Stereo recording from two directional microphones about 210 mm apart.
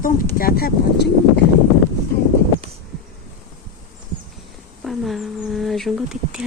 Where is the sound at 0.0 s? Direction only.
45° left (ahead or behind).